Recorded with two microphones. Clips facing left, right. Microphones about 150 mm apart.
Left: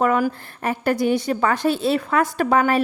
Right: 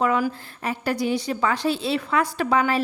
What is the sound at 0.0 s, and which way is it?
A woman's voice, 50° left (ahead or behind).